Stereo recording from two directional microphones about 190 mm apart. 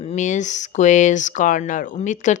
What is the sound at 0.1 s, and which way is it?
Speech, 40° left (ahead or behind).